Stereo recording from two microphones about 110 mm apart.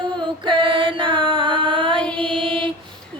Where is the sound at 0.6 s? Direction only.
50° right (ahead or behind).